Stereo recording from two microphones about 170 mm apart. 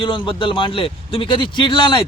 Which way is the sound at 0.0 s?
30° left (ahead or behind).